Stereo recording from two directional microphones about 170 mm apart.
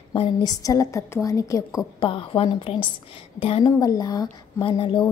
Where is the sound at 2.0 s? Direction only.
30° left (ahead or behind).